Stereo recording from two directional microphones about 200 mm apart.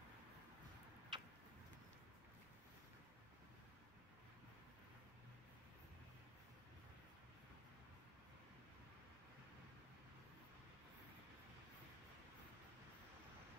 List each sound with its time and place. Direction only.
1.1 s tick-tock: 25° right (ahead or behind)